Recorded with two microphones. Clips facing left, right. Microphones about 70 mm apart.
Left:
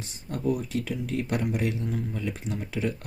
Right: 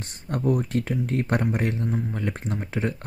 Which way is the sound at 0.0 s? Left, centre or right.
Right.